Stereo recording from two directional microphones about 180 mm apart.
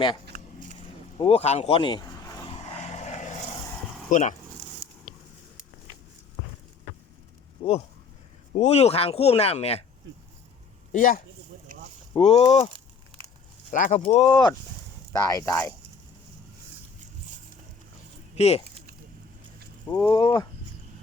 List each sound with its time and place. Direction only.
1.2 s vehicle: 35° left (ahead or behind)
2.9 s vehicle: 40° left (ahead or behind)
4.1 s speech: 45° left (ahead or behind)
7.6 s speech: 25° left (ahead or behind)
10.9 s speech: 50° left (ahead or behind)
11.7 s a sound: 45° right (ahead or behind)
12.1 s speech: 35° left (ahead or behind)
13.7 s speech: 45° left (ahead or behind)
14.0 s speech: 30° left (ahead or behind); by 15.7 s 15° left (ahead or behind)
18.3 s speech: 35° left (ahead or behind)
20.1 s speech: 25° left (ahead or behind)